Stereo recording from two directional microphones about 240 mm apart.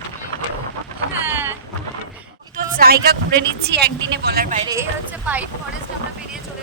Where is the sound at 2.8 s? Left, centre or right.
Right.